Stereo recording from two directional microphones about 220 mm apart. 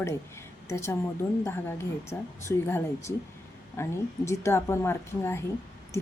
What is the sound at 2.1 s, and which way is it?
Speech, 15° left (ahead or behind).